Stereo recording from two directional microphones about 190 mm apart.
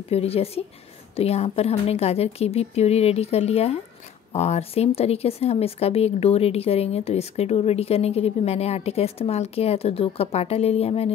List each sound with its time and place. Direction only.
0.1 s speech: 30° left (ahead or behind)